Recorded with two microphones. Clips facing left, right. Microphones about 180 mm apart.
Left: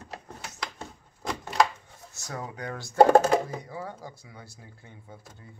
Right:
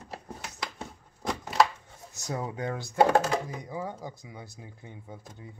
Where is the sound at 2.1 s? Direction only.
20° right (ahead or behind).